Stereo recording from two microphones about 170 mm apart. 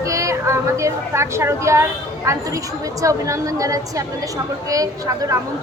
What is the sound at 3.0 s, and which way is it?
A woman's voice, 20° right (ahead or behind).